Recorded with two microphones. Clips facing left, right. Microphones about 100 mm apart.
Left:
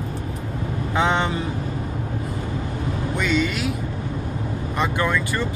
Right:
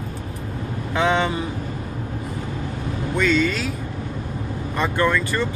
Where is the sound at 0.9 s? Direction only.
20° left (ahead or behind).